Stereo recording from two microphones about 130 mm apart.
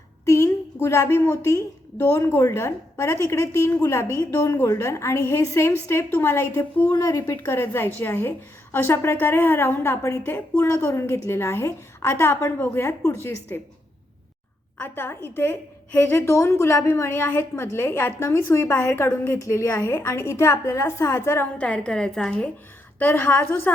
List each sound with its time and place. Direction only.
0.3 s a woman's voice: 20° left (ahead or behind)
6.9 s a woman's voice: 25° left (ahead or behind)
14.8 s a woman's voice: 15° left (ahead or behind)
21.6 s a woman's voice: 5° left (ahead or behind)